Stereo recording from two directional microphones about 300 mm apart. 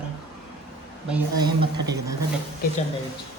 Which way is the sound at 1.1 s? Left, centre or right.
Centre.